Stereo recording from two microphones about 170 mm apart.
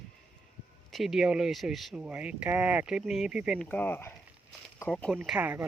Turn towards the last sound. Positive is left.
turn(degrees=-10)  # may be behind; listen again after turning